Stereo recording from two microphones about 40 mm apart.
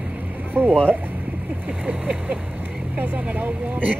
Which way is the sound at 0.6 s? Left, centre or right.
Right.